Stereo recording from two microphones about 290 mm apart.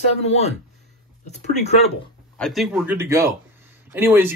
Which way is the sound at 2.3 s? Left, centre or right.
Centre.